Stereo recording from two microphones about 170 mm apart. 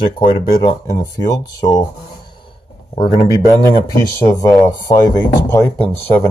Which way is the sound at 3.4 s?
20° right (ahead or behind).